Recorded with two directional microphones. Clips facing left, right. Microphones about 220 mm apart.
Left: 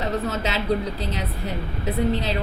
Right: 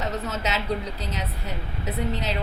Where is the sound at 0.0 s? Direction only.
30° left (ahead or behind).